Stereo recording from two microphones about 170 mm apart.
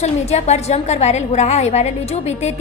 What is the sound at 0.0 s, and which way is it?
A woman's voice, 40° left (ahead or behind).